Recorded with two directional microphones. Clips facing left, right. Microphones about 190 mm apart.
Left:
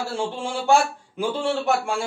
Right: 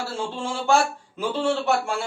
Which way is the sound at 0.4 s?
15° left (ahead or behind).